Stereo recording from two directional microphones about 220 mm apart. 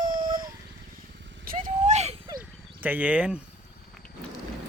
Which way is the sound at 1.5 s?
35° right (ahead or behind).